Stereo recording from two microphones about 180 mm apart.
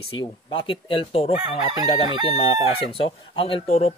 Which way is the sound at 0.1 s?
30° left (ahead or behind).